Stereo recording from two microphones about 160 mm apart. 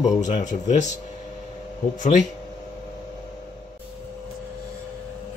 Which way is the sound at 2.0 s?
50° left (ahead or behind).